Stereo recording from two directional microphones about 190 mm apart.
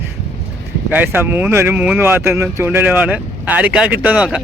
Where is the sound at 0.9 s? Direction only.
10° right (ahead or behind).